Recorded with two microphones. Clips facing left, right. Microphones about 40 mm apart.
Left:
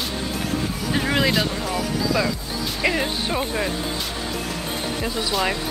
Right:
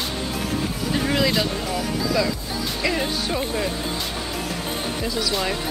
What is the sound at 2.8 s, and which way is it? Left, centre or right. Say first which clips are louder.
Speech: left 2 dB; centre.